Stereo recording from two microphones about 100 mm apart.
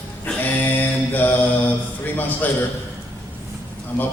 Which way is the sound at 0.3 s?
20° left (ahead or behind).